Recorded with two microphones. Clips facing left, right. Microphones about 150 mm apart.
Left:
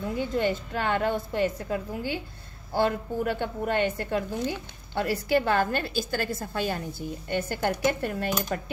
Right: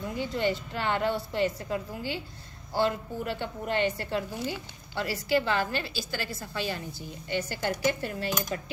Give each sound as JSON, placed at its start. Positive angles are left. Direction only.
{"t": 0.3, "sound": "a woman's voice", "side_deg": 50}